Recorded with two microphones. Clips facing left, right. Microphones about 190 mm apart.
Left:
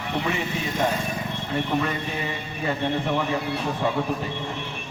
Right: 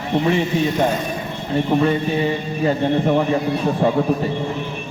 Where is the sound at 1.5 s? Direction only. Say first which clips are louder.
Right 8 dB; 30° right (ahead or behind).